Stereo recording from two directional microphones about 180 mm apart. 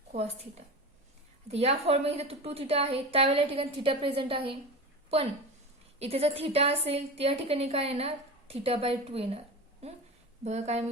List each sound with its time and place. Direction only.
0.1 s a woman's voice: 40° right (ahead or behind)
6.0 s a woman's voice: 35° right (ahead or behind)
10.4 s a woman's voice: 40° right (ahead or behind)